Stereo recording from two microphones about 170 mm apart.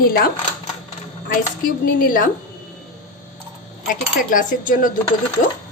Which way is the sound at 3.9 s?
50° left (ahead or behind).